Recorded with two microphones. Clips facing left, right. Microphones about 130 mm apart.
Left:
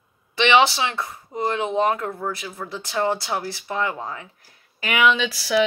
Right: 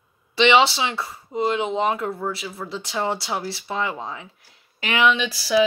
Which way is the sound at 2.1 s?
5° right (ahead or behind).